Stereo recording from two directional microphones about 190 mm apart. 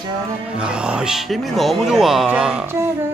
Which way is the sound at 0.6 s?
5° right (ahead or behind).